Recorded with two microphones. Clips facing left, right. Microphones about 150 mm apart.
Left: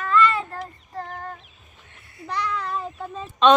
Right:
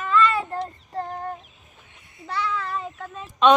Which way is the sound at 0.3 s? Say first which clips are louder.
Right 2 dB; 10° right (ahead or behind).